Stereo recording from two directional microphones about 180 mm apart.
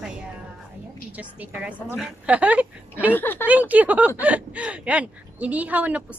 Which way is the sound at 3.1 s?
10° left (ahead or behind).